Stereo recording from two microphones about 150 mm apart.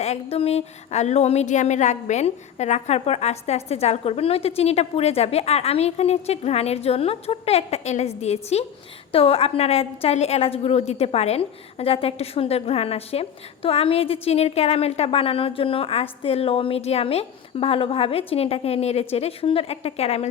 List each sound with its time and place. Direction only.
0.0 s a woman's voice: 45° left (ahead or behind)